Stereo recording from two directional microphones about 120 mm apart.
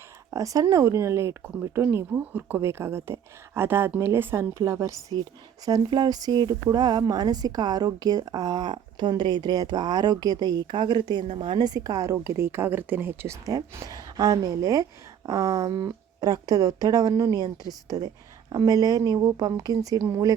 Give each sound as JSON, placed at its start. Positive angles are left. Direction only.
{"t": 0.3, "sound": "speech", "side_deg": -30}